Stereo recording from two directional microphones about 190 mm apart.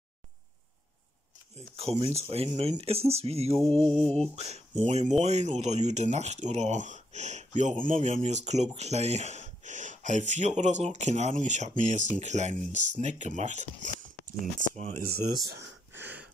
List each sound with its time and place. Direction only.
1.8 s speech: 30° right (ahead or behind)
3.5 s music: 5° left (ahead or behind)
4.4 s speech: 35° right (ahead or behind)
14.7 s speech: 40° right (ahead or behind)
15.9 s a sound: 10° right (ahead or behind)